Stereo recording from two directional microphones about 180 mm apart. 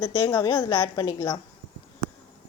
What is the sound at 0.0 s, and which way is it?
A woman's voice, 15° left (ahead or behind).